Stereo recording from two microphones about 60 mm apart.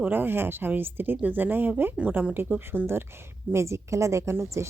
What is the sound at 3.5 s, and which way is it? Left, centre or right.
A woman's voice, right.